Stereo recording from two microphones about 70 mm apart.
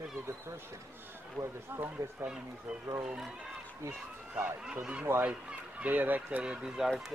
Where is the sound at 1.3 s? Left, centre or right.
Right.